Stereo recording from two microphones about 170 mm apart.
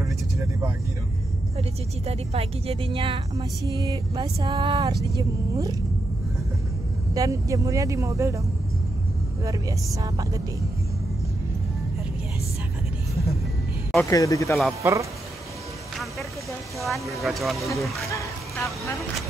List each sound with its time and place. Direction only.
1.6 s a woman's voice: 35° right (ahead or behind)
7.2 s a woman's voice: 20° right (ahead or behind)
9.4 s a woman's voice: 20° right (ahead or behind)
14.1 s speech: 20° left (ahead or behind)
14.8 s speech: 20° right (ahead or behind)
16.8 s speech: centre (ahead or behind)